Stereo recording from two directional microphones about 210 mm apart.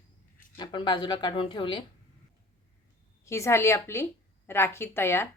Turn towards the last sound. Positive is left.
turn(degrees=10)  # may be behind; listen again after turning